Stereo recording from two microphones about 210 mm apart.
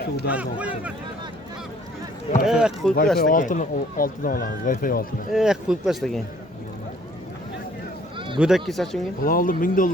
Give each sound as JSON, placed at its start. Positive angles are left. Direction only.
{"t": 0.3, "sound": "speech", "side_deg": -5}
{"t": 2.4, "sound": "speech", "side_deg": -5}
{"t": 3.2, "sound": "speech", "side_deg": 40}
{"t": 5.3, "sound": "speech", "side_deg": -5}
{"t": 8.4, "sound": "speech", "side_deg": 0}
{"t": 9.2, "sound": "speech", "side_deg": 40}